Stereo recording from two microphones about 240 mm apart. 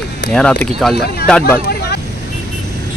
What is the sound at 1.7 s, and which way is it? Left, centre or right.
Vehicle, left.